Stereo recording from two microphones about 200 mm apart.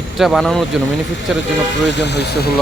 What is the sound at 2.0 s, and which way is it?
Speech, 55° left (ahead or behind).